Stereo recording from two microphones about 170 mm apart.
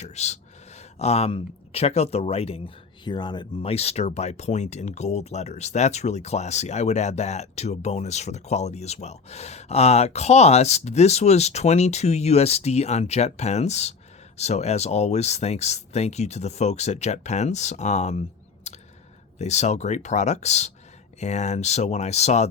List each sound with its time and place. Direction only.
0.0 s speech: 40° left (ahead or behind)
18.7 s a sound: 40° left (ahead or behind)
19.4 s speech: 40° left (ahead or behind)